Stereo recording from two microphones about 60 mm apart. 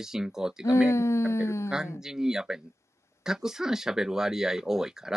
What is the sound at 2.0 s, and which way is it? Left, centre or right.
Speech, centre.